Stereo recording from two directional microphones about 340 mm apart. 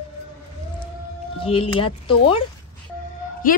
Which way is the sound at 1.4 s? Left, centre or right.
Centre.